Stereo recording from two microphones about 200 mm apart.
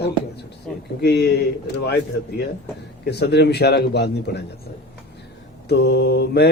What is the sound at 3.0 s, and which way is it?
A man's voice, 55° left (ahead or behind).